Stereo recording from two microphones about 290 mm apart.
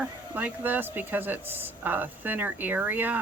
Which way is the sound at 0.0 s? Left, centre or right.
Centre.